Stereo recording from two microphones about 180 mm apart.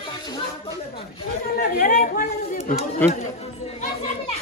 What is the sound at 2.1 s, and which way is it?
Chatter, 45° left (ahead or behind).